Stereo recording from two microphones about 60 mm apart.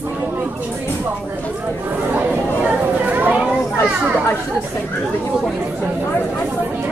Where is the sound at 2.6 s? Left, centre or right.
Right.